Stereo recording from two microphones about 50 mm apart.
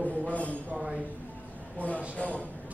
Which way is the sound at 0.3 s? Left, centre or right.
Left.